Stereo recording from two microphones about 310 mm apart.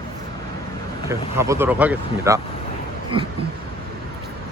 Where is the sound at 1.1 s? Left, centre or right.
Centre.